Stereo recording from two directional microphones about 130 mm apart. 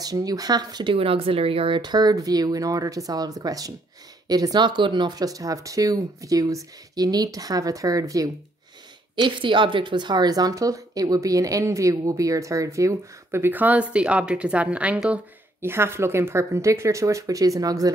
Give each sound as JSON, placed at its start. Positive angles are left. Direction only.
{"t": 0.0, "sound": "speech", "side_deg": -30}
{"t": 9.1, "sound": "speech", "side_deg": -40}